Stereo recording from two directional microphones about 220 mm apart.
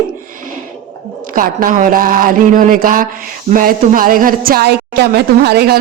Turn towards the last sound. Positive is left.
turn(degrees=-45)  # may be behind; listen again after turning